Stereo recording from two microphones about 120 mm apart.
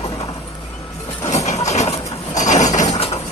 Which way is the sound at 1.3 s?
70° left (ahead or behind).